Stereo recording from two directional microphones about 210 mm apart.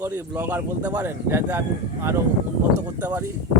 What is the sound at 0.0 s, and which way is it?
A man's voice, 10° right (ahead or behind).